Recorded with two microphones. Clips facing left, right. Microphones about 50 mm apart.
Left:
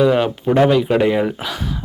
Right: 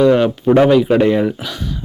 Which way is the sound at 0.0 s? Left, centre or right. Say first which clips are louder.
Right 3 dB; centre.